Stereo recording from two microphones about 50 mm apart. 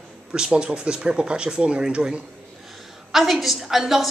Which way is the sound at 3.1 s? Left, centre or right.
Centre.